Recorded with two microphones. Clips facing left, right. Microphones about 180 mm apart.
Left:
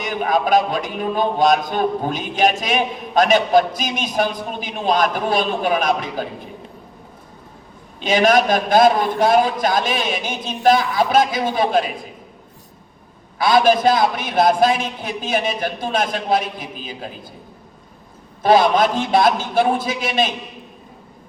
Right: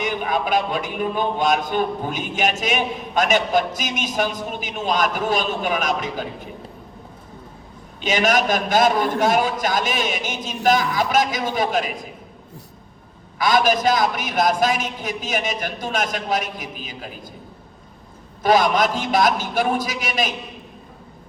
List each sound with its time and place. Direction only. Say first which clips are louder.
0.0 s a man's voice: left 3 dB; 40° left (ahead or behind)
8.0 s a man's voice: left 4 dB; 30° left (ahead or behind)
13.4 s a man's voice: left 4 dB; 30° left (ahead or behind)
18.4 s a man's voice: left 3 dB; 30° left (ahead or behind)